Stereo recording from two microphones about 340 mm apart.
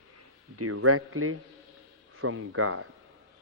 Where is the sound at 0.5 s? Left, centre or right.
Right.